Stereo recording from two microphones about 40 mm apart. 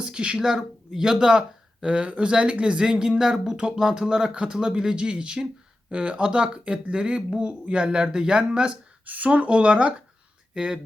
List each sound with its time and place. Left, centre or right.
0.0 s speech: right
3.6 s speech: right
9.0 s speech: right